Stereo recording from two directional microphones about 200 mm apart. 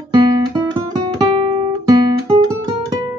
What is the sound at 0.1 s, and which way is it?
Guitar, 20° right (ahead or behind).